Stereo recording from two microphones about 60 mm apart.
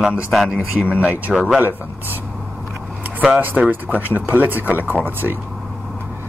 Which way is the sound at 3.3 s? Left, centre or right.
Right.